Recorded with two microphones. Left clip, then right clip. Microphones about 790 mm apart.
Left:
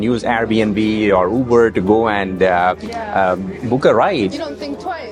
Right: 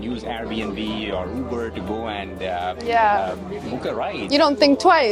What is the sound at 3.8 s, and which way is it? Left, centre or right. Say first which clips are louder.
Speech: left 14 dB; left.